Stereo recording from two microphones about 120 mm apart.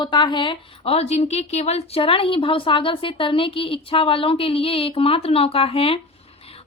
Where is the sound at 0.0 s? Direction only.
40° left (ahead or behind).